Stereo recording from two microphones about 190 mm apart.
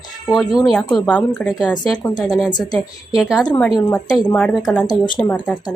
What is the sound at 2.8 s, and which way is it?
Speech, centre (ahead or behind).